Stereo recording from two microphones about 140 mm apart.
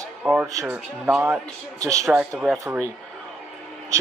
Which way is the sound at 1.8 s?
25° right (ahead or behind).